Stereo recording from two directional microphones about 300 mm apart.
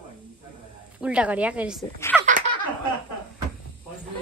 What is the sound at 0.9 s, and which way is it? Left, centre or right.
Speech, centre.